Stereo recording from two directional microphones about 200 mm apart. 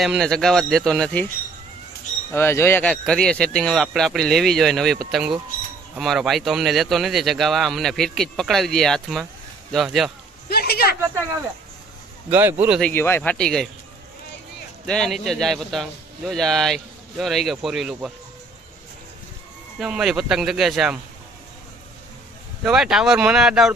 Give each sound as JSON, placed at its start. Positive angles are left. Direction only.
{"t": 0.0, "sound": "speech", "side_deg": 0}
{"t": 2.3, "sound": "speech", "side_deg": 10}
{"t": 10.5, "sound": "speech", "side_deg": 50}
{"t": 12.3, "sound": "speech", "side_deg": -10}
{"t": 12.8, "sound": "speech", "side_deg": 10}
{"t": 14.9, "sound": "speech", "side_deg": 0}
{"t": 19.8, "sound": "speech", "side_deg": -5}
{"t": 22.6, "sound": "speech", "side_deg": -5}